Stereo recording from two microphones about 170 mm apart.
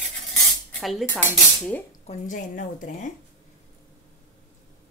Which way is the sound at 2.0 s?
50° left (ahead or behind).